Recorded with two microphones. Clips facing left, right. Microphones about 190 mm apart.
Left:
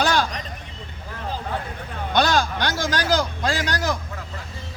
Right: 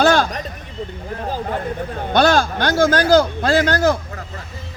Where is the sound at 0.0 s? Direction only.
50° right (ahead or behind).